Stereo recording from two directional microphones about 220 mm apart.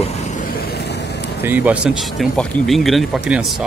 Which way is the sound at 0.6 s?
50° left (ahead or behind).